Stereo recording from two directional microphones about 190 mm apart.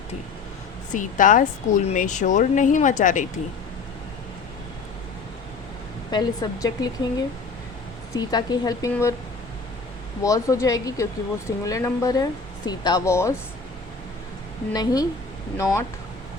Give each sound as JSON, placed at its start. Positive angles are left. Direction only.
{"t": 0.9, "sound": "speech", "side_deg": 45}
{"t": 6.1, "sound": "speech", "side_deg": 20}
{"t": 10.2, "sound": "speech", "side_deg": 15}
{"t": 14.7, "sound": "speech", "side_deg": 20}